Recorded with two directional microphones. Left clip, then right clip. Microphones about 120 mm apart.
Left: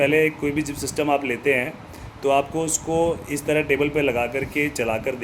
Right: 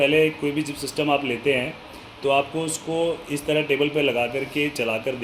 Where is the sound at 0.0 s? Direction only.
10° left (ahead or behind).